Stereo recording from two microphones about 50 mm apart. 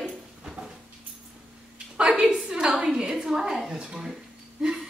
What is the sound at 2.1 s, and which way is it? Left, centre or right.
Speech, centre.